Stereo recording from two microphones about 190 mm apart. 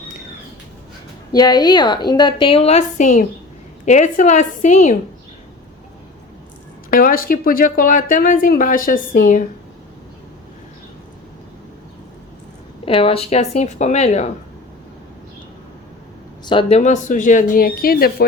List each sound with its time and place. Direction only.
1.3 s a woman's voice: 20° left (ahead or behind); by 4.9 s 40° left (ahead or behind)
6.9 s speech: 50° left (ahead or behind)
12.8 s speech: 30° left (ahead or behind)
16.5 s speech: 30° left (ahead or behind); by 18.3 s 50° left (ahead or behind)